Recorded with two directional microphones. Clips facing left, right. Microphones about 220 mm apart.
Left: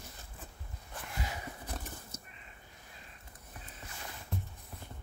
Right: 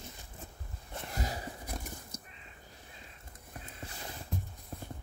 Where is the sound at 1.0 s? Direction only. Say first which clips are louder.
Right 3 dB; 40° right (ahead or behind).